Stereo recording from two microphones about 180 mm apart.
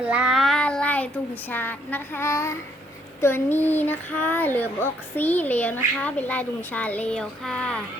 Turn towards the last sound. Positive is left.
turn(degrees=5)  # may be behind; listen again after turning